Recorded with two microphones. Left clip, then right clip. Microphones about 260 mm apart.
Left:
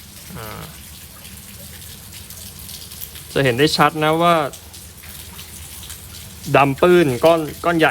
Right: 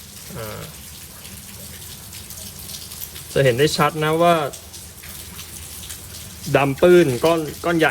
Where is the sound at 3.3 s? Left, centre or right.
Left.